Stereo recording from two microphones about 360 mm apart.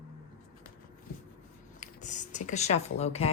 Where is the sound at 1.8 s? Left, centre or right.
Centre.